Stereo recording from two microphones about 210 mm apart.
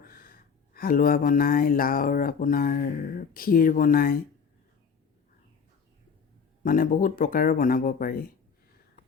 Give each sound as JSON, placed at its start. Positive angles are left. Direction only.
{"t": 0.0, "sound": "speech", "side_deg": 45}
{"t": 6.6, "sound": "speech", "side_deg": 40}